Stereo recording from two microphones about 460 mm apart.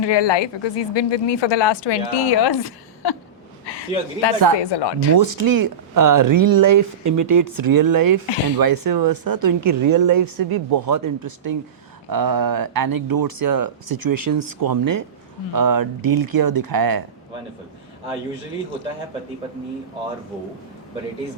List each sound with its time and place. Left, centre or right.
0.0 s a woman's voice: left
4.3 s speech: right
4.6 s speech: left
5.1 s speech: right